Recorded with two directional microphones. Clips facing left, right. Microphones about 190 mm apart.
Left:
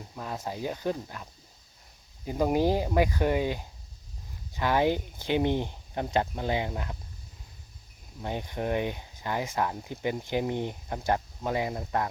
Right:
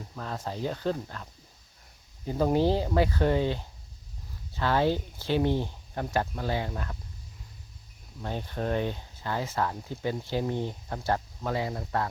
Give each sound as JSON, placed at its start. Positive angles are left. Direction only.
{"t": 0.2, "sound": "speech", "side_deg": 10}
{"t": 8.2, "sound": "speech", "side_deg": 15}